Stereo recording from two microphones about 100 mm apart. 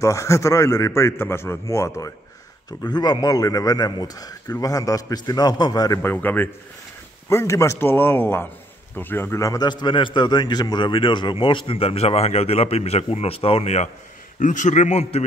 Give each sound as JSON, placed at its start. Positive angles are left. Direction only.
{"t": 0.0, "sound": "a man's voice", "side_deg": 30}
{"t": 2.8, "sound": "a man's voice", "side_deg": 45}
{"t": 6.0, "sound": "a man's voice", "side_deg": 20}
{"t": 9.7, "sound": "a man's voice", "side_deg": 50}
{"t": 15.0, "sound": "a man's voice", "side_deg": 90}